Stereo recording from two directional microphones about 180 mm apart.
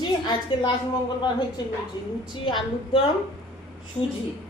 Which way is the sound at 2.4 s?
25° left (ahead or behind).